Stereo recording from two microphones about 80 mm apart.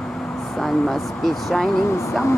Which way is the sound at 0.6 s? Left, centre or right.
Centre.